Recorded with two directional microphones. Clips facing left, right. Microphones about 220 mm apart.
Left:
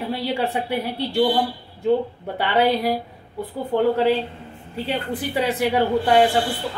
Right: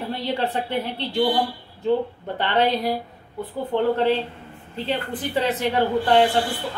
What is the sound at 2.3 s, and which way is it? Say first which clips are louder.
A woman's voice: left 2 dB; 10° left (ahead or behind).